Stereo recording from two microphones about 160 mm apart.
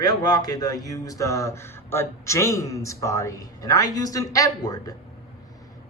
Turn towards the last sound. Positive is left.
turn(degrees=20)  # may be behind; listen again after turning